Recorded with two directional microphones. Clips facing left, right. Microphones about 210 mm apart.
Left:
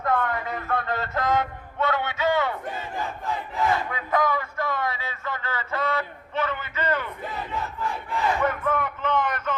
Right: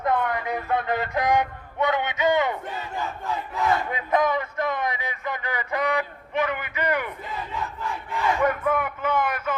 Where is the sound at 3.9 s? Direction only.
20° right (ahead or behind).